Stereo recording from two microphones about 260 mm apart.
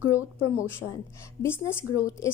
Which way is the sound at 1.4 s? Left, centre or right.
Centre.